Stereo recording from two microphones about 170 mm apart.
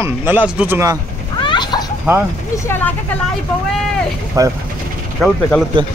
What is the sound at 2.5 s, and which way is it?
Vehicle, 15° left (ahead or behind).